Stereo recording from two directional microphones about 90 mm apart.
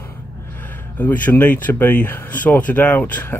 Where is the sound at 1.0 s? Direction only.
20° left (ahead or behind).